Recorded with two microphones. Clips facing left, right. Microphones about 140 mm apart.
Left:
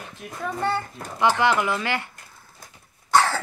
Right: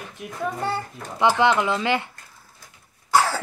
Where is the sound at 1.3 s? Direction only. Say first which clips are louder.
Right 2 dB; 20° right (ahead or behind).